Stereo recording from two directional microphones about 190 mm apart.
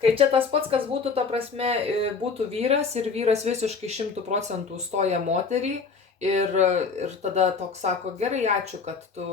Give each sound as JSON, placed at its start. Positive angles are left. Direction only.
{"t": 0.0, "sound": "speech", "side_deg": -30}